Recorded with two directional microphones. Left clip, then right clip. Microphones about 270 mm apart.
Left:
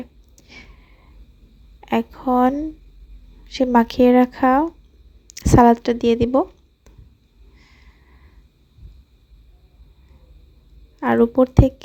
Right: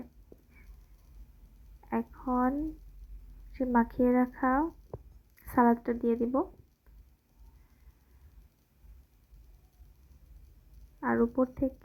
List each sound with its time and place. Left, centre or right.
1.8 s a woman's voice: left
3.6 s speech: left
11.0 s speech: left